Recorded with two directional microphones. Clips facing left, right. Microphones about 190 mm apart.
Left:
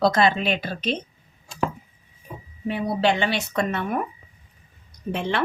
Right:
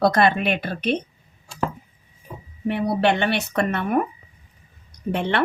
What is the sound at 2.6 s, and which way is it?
Speech, 60° right (ahead or behind).